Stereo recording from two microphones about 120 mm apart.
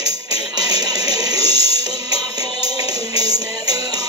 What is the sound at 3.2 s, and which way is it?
Music, 35° right (ahead or behind).